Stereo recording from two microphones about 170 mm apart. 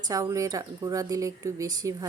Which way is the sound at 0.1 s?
20° right (ahead or behind).